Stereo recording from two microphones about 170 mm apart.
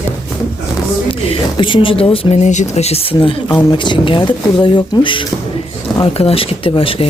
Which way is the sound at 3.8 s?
30° left (ahead or behind).